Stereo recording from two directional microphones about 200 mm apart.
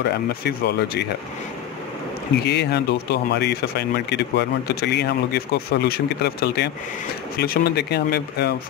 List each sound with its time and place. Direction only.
0.4 s speech: 50° left (ahead or behind)
2.4 s speech: 55° left (ahead or behind)